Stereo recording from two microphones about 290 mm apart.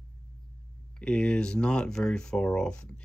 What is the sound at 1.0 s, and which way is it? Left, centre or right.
Speech, centre.